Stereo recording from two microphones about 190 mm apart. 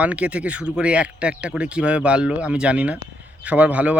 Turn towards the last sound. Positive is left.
turn(degrees=-5)  # may be behind; listen again after turning